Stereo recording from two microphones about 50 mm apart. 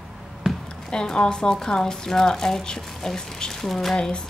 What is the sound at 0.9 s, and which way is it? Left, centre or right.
Speech, centre.